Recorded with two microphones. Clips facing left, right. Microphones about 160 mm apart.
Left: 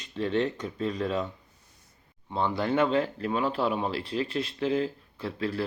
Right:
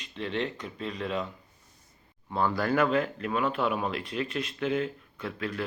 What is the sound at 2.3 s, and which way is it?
Speech, 25° left (ahead or behind).